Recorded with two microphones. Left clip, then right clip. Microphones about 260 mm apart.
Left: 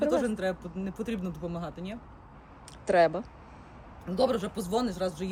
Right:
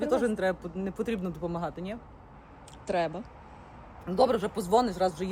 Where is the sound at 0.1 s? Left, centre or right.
Centre.